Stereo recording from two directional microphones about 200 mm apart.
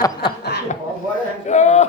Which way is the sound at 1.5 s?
35° left (ahead or behind).